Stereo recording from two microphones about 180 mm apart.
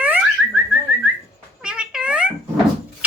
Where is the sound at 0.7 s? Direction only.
10° right (ahead or behind).